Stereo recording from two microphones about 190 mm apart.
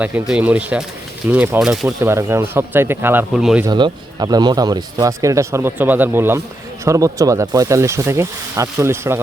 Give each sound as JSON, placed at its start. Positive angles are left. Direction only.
{"t": 0.0, "sound": "speech", "side_deg": -5}
{"t": 2.0, "sound": "speech", "side_deg": -15}
{"t": 3.6, "sound": "speech", "side_deg": -25}